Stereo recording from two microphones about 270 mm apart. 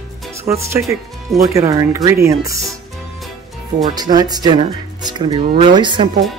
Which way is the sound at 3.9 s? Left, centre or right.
Centre.